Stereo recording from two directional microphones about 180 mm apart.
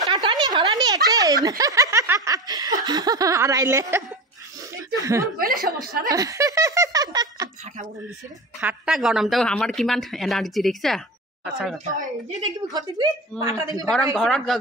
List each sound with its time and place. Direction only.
0.1 s snicker: 25° right (ahead or behind)
5.0 s speech: 15° right (ahead or behind)
5.4 s chuckle: 55° right (ahead or behind)
6.0 s a sound: 20° right (ahead or behind)
8.5 s speech: 5° right (ahead or behind)
12.6 s a woman's voice: 20° right (ahead or behind)
14.1 s speech: centre (ahead or behind)